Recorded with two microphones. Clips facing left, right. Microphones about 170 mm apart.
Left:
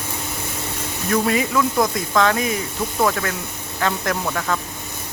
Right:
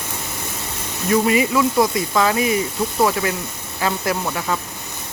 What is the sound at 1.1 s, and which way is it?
Speech, 10° right (ahead or behind).